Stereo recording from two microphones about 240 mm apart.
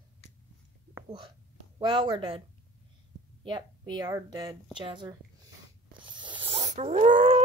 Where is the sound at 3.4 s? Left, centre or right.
Centre.